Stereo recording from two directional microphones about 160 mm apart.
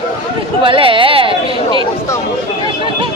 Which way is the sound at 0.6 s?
35° right (ahead or behind).